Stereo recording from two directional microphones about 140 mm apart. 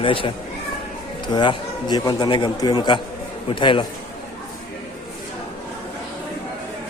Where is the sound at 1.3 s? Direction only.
30° left (ahead or behind).